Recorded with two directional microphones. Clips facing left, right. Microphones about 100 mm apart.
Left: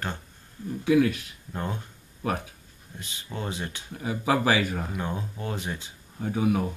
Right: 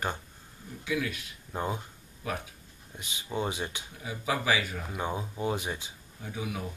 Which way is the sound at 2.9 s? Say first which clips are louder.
Right 3 dB; 15° right (ahead or behind).